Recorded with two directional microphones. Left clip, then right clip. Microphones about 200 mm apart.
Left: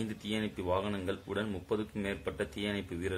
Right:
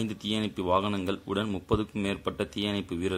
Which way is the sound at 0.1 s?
40° right (ahead or behind).